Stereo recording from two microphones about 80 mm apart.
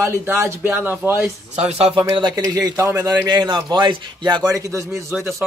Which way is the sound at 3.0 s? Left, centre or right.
Right.